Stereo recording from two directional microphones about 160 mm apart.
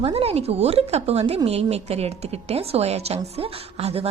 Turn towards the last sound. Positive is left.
turn(degrees=-40)  # may be behind; listen again after turning